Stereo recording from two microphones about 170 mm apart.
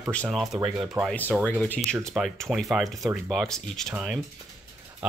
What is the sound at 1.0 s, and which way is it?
A man's voice, 10° left (ahead or behind).